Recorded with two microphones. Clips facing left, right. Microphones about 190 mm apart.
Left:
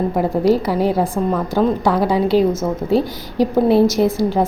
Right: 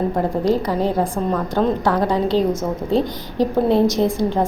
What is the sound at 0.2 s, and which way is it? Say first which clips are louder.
A woman's voice: left 5 dB; 10° left (ahead or behind).